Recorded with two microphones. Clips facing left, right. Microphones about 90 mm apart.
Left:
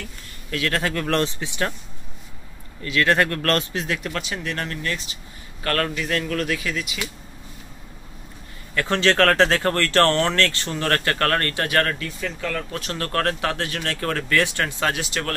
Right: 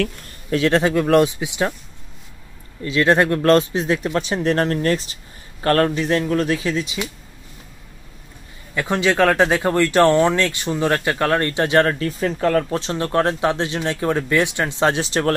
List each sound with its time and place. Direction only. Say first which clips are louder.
0.5 s speech: right 7 dB; 25° right (ahead or behind)
1.0 s speech: right 7 dB; 10° right (ahead or behind)
2.8 s speech: right 4 dB; 20° right (ahead or behind)
8.7 s speech: right 1 dB; 15° right (ahead or behind); by 12.8 s 40° right (ahead or behind)
12.8 s speech: right 5 dB; 20° right (ahead or behind)